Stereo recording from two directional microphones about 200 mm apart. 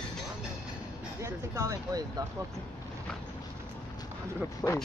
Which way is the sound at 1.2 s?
15° right (ahead or behind).